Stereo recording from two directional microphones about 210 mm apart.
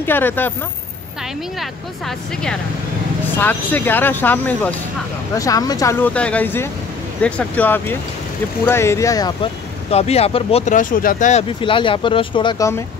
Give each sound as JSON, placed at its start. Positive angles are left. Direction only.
{"t": 0.0, "sound": "speech", "side_deg": 10}
{"t": 1.6, "sound": "speech", "side_deg": 0}
{"t": 9.8, "sound": "speech", "side_deg": 30}